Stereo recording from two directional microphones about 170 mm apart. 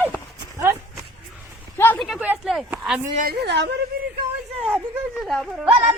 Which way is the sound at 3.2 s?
65° right (ahead or behind).